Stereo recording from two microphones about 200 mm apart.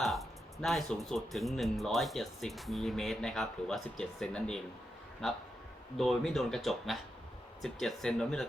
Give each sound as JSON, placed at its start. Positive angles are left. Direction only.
{"t": 0.0, "sound": "speech", "side_deg": 0}
{"t": 6.0, "sound": "speech", "side_deg": 0}